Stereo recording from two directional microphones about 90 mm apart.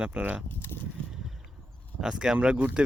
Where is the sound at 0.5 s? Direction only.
25° left (ahead or behind).